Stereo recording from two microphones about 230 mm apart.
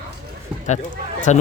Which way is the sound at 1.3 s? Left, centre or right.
Left.